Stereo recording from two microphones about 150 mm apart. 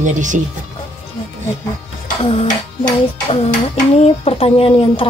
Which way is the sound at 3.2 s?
40° left (ahead or behind).